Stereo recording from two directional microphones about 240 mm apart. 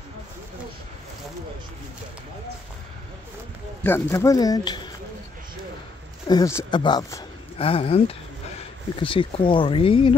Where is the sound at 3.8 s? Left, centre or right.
Centre.